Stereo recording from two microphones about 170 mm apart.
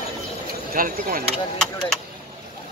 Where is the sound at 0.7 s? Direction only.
55° right (ahead or behind).